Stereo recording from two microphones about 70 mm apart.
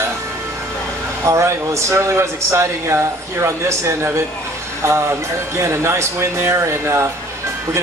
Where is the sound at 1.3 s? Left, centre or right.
Right.